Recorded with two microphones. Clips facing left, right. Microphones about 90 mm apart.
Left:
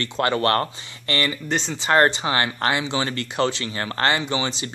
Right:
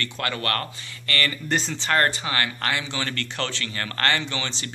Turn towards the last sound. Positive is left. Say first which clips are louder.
# left 6 dB
turn(degrees=15)  # may be behind; listen again after turning